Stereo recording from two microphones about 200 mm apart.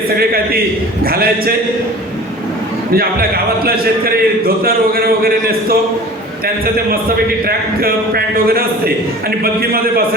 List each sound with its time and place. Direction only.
1.0 s a man's voice: 50° right (ahead or behind)
2.9 s a man's voice: 50° right (ahead or behind)
7.4 s a man's voice: 50° right (ahead or behind)